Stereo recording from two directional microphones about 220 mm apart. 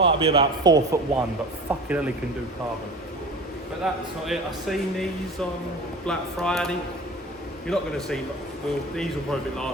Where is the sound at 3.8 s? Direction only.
Centre (ahead or behind).